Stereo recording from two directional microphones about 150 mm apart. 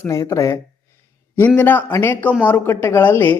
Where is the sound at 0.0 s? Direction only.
20° left (ahead or behind).